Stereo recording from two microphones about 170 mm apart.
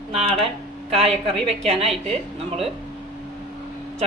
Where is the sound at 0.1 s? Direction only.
35° right (ahead or behind).